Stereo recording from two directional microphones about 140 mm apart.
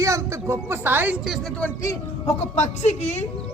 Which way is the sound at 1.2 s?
Centre (ahead or behind).